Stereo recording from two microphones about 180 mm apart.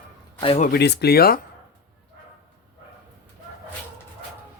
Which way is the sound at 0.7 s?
65° left (ahead or behind).